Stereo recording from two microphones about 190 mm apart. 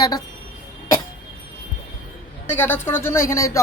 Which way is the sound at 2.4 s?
10° left (ahead or behind).